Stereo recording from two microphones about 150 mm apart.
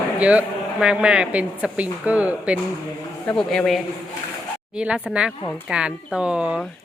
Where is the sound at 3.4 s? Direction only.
Centre (ahead or behind).